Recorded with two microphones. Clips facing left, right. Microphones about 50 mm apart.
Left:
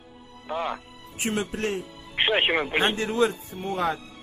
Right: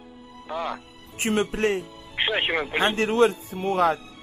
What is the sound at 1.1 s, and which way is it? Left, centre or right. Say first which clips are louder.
Speech: right 4 dB; right.